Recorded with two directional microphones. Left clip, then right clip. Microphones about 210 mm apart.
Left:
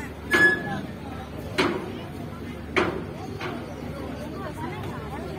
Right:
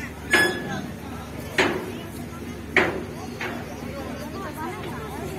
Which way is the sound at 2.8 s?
55° left (ahead or behind).